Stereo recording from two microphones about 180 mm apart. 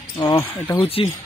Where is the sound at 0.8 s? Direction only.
30° left (ahead or behind).